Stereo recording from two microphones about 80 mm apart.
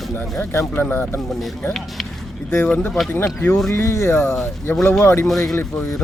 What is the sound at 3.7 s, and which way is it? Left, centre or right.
Speech, left.